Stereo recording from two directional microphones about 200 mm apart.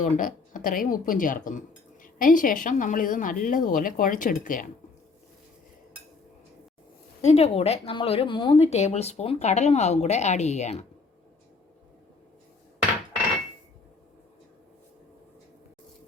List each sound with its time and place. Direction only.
0.0 s speech: 40° left (ahead or behind)
7.3 s speech: 30° left (ahead or behind)